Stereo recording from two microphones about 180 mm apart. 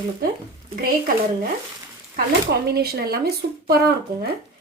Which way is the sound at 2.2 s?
60° right (ahead or behind).